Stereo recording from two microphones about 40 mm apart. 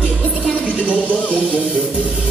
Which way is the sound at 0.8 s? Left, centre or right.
Right.